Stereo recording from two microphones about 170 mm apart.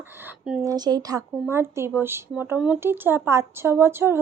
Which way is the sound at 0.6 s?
20° right (ahead or behind).